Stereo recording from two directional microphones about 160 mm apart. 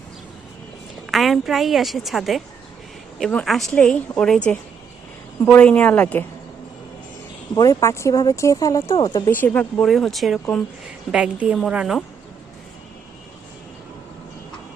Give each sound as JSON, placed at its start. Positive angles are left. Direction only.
{"t": 1.0, "sound": "a woman's voice", "side_deg": 0}
{"t": 5.4, "sound": "a woman's voice", "side_deg": 10}
{"t": 7.5, "sound": "speech", "side_deg": 20}
{"t": 9.0, "sound": "speech", "side_deg": 30}
{"t": 9.4, "sound": "a woman's voice", "side_deg": 10}